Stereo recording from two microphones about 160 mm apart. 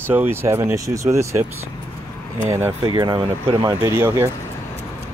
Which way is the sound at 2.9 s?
30° right (ahead or behind).